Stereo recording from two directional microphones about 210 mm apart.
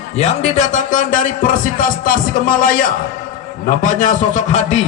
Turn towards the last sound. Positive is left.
turn(degrees=30)  # may be behind; listen again after turning